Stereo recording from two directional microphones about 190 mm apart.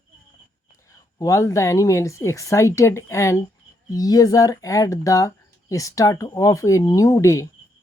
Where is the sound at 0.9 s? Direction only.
15° left (ahead or behind).